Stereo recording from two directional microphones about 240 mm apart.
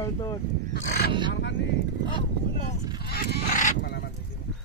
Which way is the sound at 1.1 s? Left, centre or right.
Centre.